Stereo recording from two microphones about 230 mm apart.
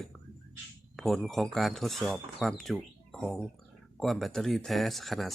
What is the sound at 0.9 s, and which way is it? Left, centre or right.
Speech, centre.